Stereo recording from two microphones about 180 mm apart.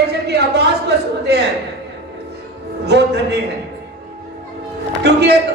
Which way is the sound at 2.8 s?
70° right (ahead or behind).